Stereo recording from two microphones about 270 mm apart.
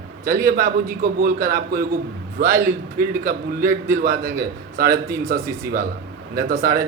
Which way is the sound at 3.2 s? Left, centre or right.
Right.